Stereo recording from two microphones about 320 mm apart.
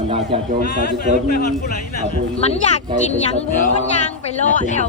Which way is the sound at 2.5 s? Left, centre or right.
Left.